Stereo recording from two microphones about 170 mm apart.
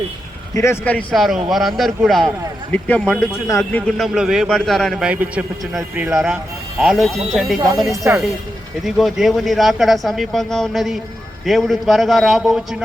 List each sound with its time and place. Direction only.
0.5 s speech: 15° left (ahead or behind)
3.0 s speech: centre (ahead or behind)
3.4 s speech: 15° left (ahead or behind)
3.9 s speech: centre (ahead or behind)
6.1 s speech: 5° right (ahead or behind)
8.1 s speech: 15° right (ahead or behind)
8.8 s speech: centre (ahead or behind)